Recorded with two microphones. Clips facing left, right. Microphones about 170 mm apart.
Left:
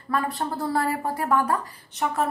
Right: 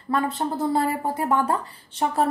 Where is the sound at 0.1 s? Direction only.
20° right (ahead or behind).